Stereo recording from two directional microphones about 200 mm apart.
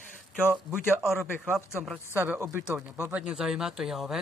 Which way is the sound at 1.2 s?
10° right (ahead or behind).